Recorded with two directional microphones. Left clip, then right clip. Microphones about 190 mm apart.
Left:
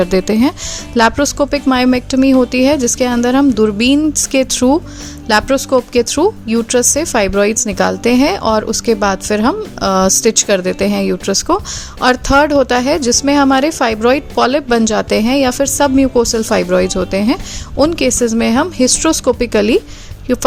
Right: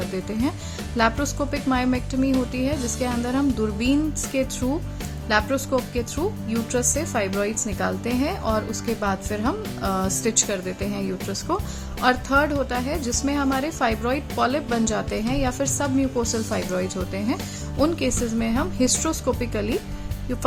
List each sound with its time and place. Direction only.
0.1 s speech: 55° left (ahead or behind)